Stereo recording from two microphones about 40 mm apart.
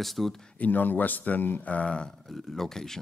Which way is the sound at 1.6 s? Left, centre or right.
Left.